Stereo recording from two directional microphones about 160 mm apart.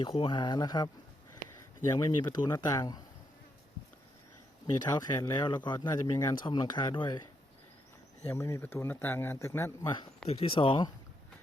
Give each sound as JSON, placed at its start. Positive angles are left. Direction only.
{"t": 0.0, "sound": "speech", "side_deg": 30}
{"t": 4.6, "sound": "speech", "side_deg": 25}
{"t": 8.3, "sound": "speech", "side_deg": 15}
{"t": 9.8, "sound": "speech", "side_deg": 30}